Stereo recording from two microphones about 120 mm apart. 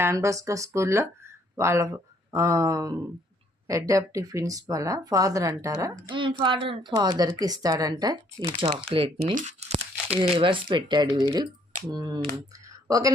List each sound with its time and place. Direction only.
0.0 s speech: 25° right (ahead or behind)
6.1 s a woman's voice: 45° right (ahead or behind)
6.9 s speech: 35° right (ahead or behind)
8.9 s a woman's voice: 50° right (ahead or behind)
9.3 s tearing: 80° right; by 10.2 s 60° right (ahead or behind)
10.3 s speech: 45° right (ahead or behind)
12.6 s a sound: 30° right (ahead or behind)